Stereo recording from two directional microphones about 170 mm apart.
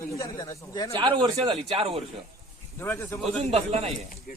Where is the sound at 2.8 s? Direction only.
15° left (ahead or behind).